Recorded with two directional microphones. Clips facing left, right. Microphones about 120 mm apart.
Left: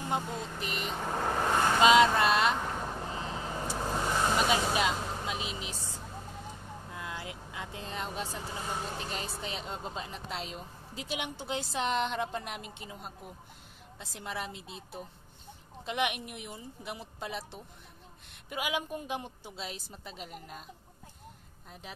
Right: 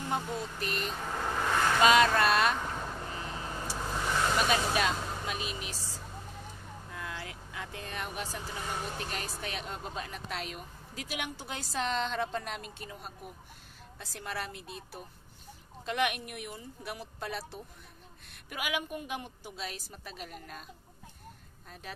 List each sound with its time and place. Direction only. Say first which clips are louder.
0.1 s speech: even; 20° left (ahead or behind)
3.2 s vehicle: left 2 dB; 25° left (ahead or behind)
6.9 s speech: even; 20° left (ahead or behind)
21.8 s speech: right 2 dB; 20° left (ahead or behind)